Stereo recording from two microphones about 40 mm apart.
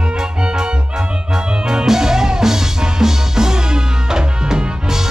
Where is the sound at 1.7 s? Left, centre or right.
Centre.